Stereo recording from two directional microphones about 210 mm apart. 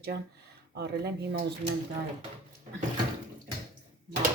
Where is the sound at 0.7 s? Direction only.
55° right (ahead or behind).